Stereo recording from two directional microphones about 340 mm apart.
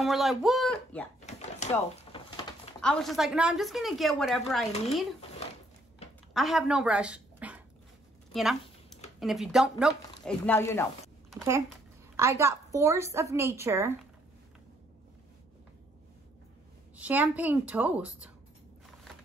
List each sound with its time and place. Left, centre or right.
0.0 s speech: centre
1.2 s a sound: centre
2.8 s a woman's voice: centre
6.3 s a woman's voice: centre
8.3 s a sound: centre
9.2 s a woman's voice: centre
11.3 s a child's voice: centre
16.9 s a woman's voice: centre